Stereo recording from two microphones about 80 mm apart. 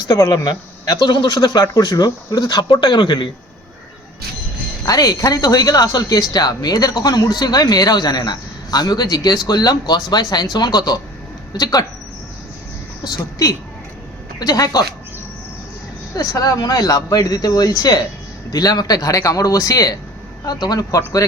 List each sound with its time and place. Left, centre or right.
0.1 s speech: left
4.9 s speech: left
13.1 s speech: left
16.1 s speech: left